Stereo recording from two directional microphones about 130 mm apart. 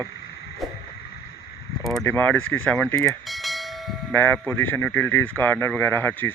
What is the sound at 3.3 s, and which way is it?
Bell, centre (ahead or behind).